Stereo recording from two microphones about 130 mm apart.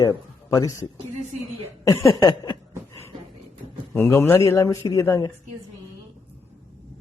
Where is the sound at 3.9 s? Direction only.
20° left (ahead or behind).